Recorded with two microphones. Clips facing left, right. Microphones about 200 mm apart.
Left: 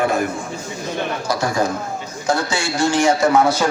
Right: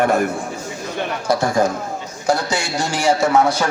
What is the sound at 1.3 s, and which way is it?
Speech, 50° right (ahead or behind).